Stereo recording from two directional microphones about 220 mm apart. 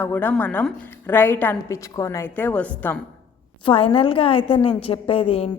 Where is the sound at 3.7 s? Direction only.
25° left (ahead or behind).